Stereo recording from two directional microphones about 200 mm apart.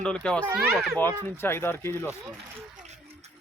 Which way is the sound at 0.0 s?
5° left (ahead or behind).